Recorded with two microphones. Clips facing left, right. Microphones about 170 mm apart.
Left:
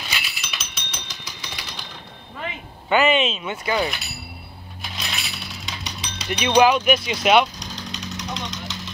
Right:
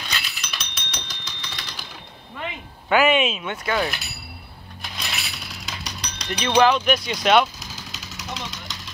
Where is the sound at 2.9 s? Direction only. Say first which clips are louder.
Even; 5° right (ahead or behind).